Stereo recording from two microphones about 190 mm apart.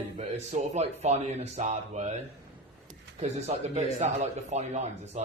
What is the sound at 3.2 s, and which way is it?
Speech, 35° right (ahead or behind).